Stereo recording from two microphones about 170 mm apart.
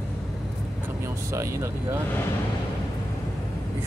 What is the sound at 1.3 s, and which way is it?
Speech, 15° right (ahead or behind).